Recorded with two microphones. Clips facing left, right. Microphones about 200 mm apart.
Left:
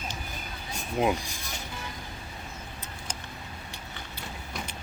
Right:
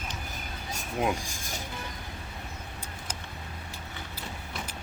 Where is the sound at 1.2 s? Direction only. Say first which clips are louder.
Even; 45° right (ahead or behind).